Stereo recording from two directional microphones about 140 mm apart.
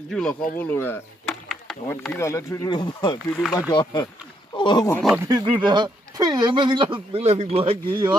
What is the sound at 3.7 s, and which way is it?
Speech, 30° left (ahead or behind).